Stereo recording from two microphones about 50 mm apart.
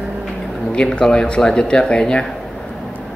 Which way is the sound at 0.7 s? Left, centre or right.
Centre.